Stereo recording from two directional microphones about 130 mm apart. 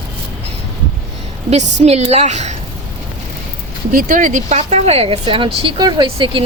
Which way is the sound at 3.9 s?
85° right.